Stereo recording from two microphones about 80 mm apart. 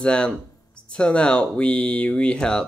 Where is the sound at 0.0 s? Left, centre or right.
Centre.